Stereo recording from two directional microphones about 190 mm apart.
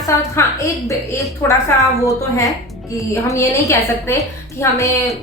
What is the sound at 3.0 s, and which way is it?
A woman's voice, 15° left (ahead or behind).